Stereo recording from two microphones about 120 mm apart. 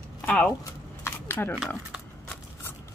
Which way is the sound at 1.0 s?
20° left (ahead or behind).